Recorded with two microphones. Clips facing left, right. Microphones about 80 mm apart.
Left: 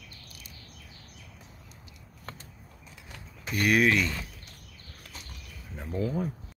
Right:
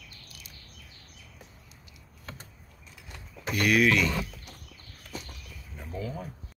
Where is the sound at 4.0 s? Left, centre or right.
Right.